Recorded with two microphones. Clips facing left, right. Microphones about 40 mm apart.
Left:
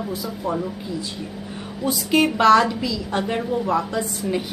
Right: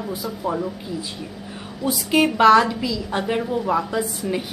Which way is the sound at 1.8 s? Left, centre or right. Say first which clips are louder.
Even; centre.